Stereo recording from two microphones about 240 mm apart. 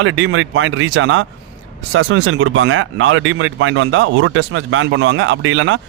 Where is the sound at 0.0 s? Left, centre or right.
Right.